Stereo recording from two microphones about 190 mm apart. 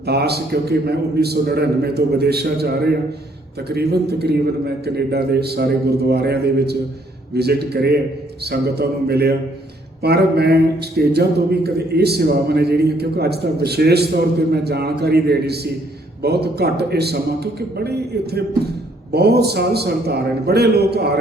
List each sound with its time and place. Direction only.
0.0 s speech: 60° right (ahead or behind)